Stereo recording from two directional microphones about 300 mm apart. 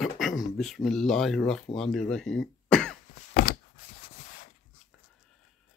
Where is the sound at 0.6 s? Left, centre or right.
Centre.